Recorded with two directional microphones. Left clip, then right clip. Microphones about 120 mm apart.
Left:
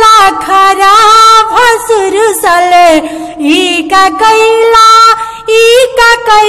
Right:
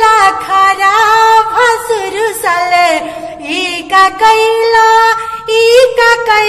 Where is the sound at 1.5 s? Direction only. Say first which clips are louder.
Left 4 dB; 40° left (ahead or behind).